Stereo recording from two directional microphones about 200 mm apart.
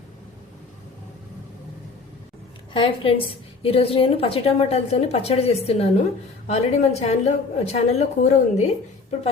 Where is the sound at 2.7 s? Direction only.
25° left (ahead or behind).